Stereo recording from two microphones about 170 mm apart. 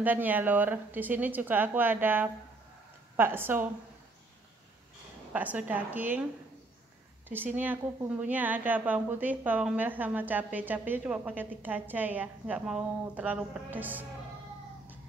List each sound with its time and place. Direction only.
0.0 s a woman's voice: 10° right (ahead or behind)
5.3 s a woman's voice: 10° right (ahead or behind)
7.2 s a woman's voice: 10° right (ahead or behind)